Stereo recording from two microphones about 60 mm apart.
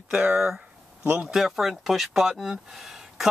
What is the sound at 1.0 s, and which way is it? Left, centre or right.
Speech, right.